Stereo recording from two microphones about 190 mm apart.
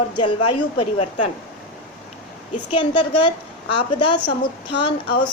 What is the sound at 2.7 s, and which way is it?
A woman's voice, 25° left (ahead or behind).